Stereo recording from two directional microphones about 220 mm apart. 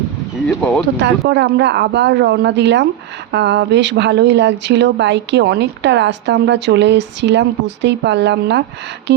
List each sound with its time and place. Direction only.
0.4 s speech: 5° left (ahead or behind)
0.9 s speech: 50° right (ahead or behind)